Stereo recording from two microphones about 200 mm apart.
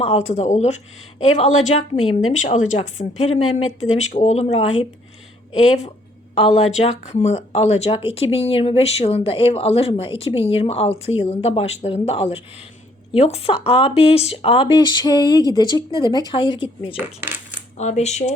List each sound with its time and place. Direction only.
0.0 s speech: 30° left (ahead or behind)
6.3 s speech: 30° left (ahead or behind)
17.0 s speech: 10° right (ahead or behind)
17.7 s speech: 35° left (ahead or behind)